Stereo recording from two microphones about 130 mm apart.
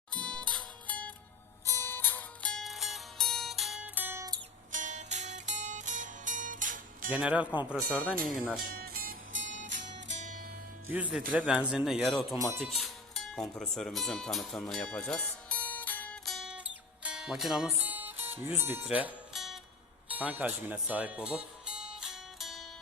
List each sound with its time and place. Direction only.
0.1 s music: 5° left (ahead or behind)
1.6 s zither: 20° left (ahead or behind); by 4.3 s 15° right (ahead or behind)
4.7 s music: 70° right (ahead or behind); by 7.1 s 90° right
7.1 s speech: 10° right (ahead or behind)
7.9 s speech: 10° left (ahead or behind)
9.0 s music: 90° right
10.9 s speech: 10° right (ahead or behind)
12.5 s music: centre (ahead or behind)
13.6 s speech: 5° left (ahead or behind)
16.2 s music: centre (ahead or behind)
17.7 s music: 15° right (ahead or behind)
18.9 s speech: 10° right (ahead or behind)
19.3 s music: centre (ahead or behind)
20.1 s music: 10° right (ahead or behind)